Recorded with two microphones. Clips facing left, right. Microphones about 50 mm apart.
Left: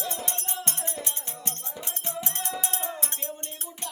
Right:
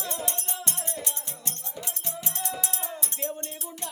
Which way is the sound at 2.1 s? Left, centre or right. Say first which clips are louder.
Left 2 dB; left.